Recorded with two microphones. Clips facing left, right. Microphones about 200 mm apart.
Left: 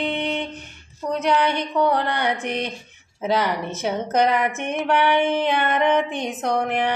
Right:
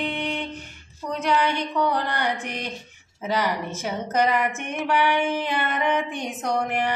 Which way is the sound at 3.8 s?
65° left (ahead or behind).